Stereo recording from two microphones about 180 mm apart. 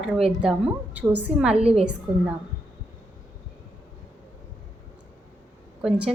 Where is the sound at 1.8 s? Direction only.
5° right (ahead or behind).